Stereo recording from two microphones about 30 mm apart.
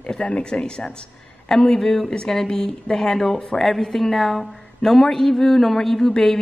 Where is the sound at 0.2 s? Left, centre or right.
Left; by 3.1 s centre.